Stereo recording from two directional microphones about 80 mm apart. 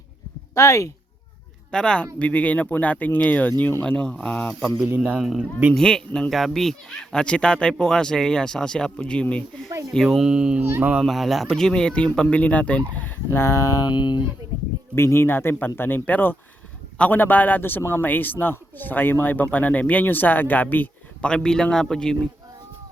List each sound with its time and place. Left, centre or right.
0.5 s speech: left
1.7 s a man's voice: centre
3.8 s speech: centre
5.2 s a man's voice: centre
5.7 s speech: centre
10.1 s speech: centre
10.6 s speech: right
11.0 s speech: centre; by 13.8 s left
13.8 s speech: left
14.9 s a man's voice: left
21.2 s speech: centre